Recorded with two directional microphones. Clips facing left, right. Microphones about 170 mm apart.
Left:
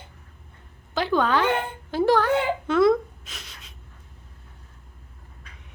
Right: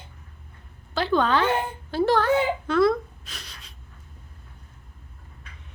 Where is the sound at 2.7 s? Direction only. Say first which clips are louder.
Left 3 dB; 20° left (ahead or behind).